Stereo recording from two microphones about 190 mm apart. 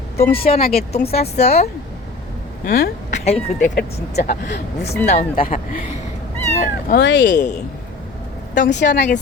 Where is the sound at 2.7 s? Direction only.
50° left (ahead or behind).